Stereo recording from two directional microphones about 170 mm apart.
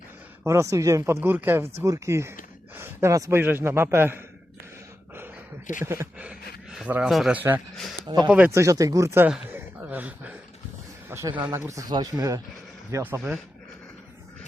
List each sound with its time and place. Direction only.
0.4 s speech: 15° right (ahead or behind)
5.8 s a man's voice: 15° right (ahead or behind)
9.5 s a sound: 10° right (ahead or behind)
11.3 s speech: 10° right (ahead or behind)